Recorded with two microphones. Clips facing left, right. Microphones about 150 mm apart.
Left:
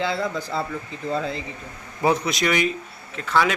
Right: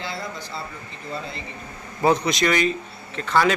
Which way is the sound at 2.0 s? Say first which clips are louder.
Right 2 dB; 5° left (ahead or behind).